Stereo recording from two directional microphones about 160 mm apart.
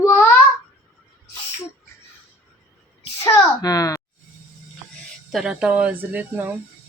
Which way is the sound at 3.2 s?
20° left (ahead or behind).